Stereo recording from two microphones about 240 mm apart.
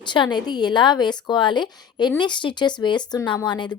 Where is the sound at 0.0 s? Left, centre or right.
Centre.